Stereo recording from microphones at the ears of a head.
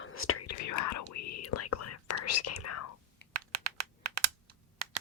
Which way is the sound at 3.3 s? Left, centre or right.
Right.